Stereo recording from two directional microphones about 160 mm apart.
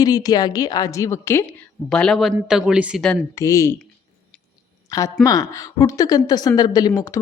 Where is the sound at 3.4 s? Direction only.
20° left (ahead or behind).